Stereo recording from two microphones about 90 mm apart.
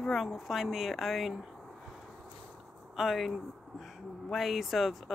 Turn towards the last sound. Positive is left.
turn(degrees=0)  # may be behind; listen again after turning